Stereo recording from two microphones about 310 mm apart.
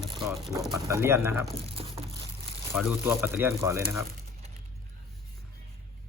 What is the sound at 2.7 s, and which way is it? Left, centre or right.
Speech, centre.